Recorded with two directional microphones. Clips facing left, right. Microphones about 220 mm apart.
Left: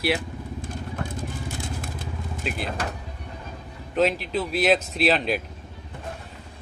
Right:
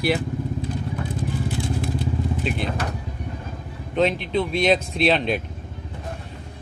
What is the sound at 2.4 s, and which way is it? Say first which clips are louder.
Speech: right 5 dB; centre (ahead or behind).